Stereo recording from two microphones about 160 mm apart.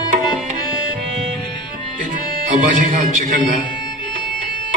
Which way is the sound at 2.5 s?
55° right (ahead or behind).